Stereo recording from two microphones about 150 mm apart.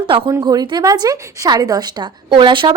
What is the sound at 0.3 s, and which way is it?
A woman's voice, 25° right (ahead or behind).